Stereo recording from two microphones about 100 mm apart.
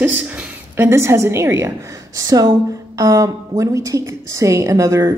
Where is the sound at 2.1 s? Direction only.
40° right (ahead or behind).